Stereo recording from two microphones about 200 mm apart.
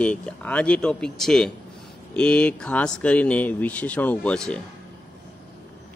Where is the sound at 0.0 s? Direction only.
5° left (ahead or behind).